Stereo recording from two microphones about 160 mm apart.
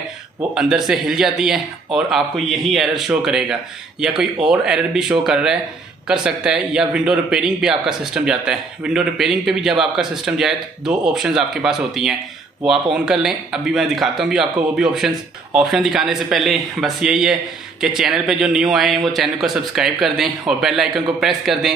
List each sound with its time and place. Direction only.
0.6 s a man's voice: 5° right (ahead or behind)